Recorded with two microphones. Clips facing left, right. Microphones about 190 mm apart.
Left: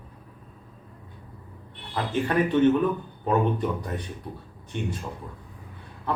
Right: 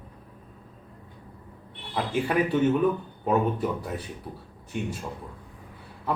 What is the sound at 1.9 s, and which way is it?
A man's voice, 10° right (ahead or behind).